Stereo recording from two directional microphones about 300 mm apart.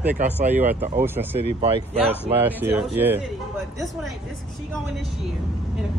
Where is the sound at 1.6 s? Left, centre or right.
Centre.